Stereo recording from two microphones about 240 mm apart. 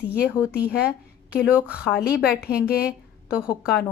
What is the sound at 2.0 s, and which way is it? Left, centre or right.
Speech, left.